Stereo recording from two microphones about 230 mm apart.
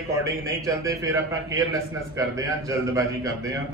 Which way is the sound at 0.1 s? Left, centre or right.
Centre.